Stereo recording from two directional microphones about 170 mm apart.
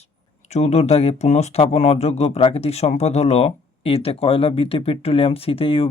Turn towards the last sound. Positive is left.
turn(degrees=35)  # may be behind; listen again after turning